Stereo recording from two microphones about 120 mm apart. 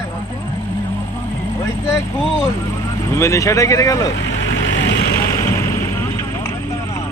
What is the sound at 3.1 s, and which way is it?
Speech, 25° left (ahead or behind).